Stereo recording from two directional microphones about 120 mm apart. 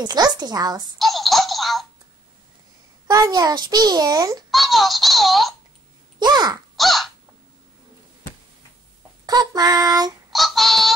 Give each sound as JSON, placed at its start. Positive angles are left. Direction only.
{"t": 0.0, "sound": "a child's voice", "side_deg": -35}
{"t": 0.9, "sound": "a sound", "side_deg": 0}
{"t": 3.1, "sound": "a child's voice", "side_deg": -30}
{"t": 4.5, "sound": "a sound", "side_deg": 0}
{"t": 6.1, "sound": "a child's voice", "side_deg": -35}
{"t": 6.8, "sound": "crow", "side_deg": 0}
{"t": 9.2, "sound": "a child's voice", "side_deg": -35}
{"t": 10.3, "sound": "synthetic singing", "side_deg": 0}